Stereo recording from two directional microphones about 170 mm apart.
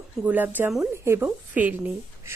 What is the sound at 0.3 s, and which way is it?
A woman's voice, 10° right (ahead or behind).